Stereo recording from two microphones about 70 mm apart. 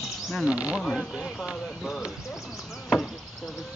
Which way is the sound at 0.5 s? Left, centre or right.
Centre.